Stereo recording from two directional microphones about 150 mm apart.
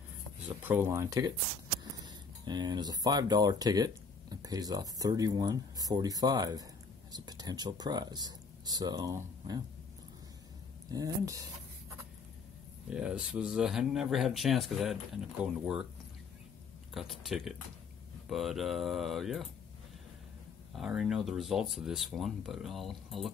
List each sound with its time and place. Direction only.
0.7 s speech: 15° right (ahead or behind)
10.9 s speech: 25° right (ahead or behind)
12.9 s speech: 5° right (ahead or behind)
16.9 s speech: centre (ahead or behind)
20.7 s speech: centre (ahead or behind)